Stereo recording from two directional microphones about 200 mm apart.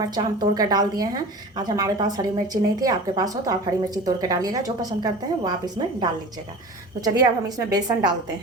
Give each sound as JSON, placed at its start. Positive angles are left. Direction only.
{"t": 0.0, "sound": "a woman's voice", "side_deg": -20}